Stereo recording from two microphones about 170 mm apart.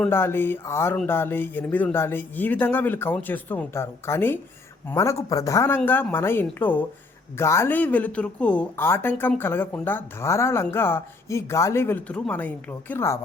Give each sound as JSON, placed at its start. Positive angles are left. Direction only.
{"t": 0.0, "sound": "speech", "side_deg": 15}